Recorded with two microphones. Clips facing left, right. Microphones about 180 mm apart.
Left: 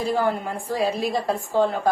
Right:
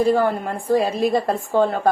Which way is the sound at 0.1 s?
55° right (ahead or behind).